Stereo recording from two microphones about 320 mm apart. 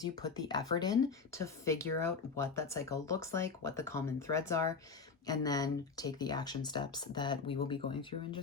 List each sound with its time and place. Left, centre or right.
0.0 s speech: centre